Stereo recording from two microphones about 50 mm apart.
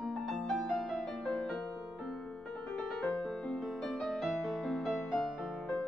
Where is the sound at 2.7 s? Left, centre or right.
Centre.